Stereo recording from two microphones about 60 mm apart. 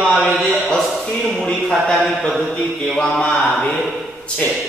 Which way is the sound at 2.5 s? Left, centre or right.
Centre.